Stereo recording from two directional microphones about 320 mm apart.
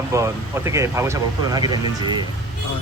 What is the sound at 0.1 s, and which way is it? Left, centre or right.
Speech, centre.